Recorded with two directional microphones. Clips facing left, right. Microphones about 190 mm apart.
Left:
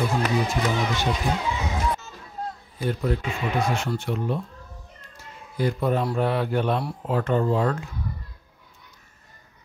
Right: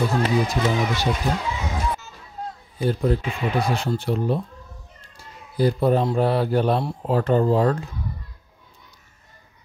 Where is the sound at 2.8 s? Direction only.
30° right (ahead or behind).